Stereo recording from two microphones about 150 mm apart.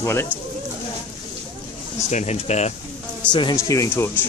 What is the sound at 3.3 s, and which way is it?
Speech, 30° left (ahead or behind).